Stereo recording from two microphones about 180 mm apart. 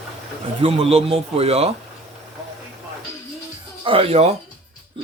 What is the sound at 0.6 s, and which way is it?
Speech, 30° right (ahead or behind).